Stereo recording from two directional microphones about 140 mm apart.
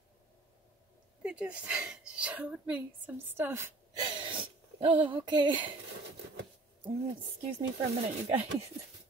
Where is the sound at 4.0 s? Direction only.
35° right (ahead or behind).